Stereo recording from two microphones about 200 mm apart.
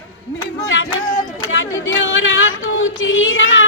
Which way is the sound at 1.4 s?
75° left (ahead or behind).